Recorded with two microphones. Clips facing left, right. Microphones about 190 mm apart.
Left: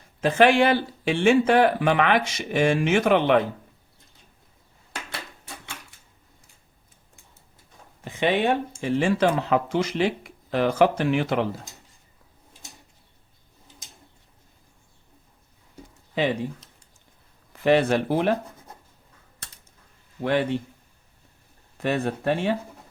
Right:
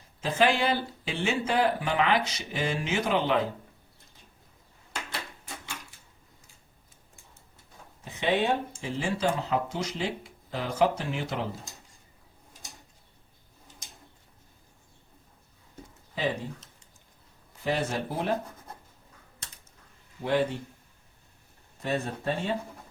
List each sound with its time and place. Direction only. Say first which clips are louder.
0.2 s speech: left 7 dB; 70° left (ahead or behind)
8.0 s speech: left 4 dB; 80° left
16.1 s speech: left 6 dB; 70° left (ahead or behind)
20.2 s speech: left 3 dB; 70° left (ahead or behind)
21.8 s speech: left 6 dB; 75° left (ahead or behind)